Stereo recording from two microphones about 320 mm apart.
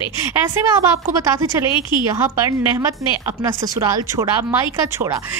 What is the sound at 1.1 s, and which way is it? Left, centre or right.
A woman's voice, centre.